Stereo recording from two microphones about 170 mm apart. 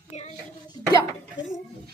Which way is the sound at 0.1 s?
40° left (ahead or behind).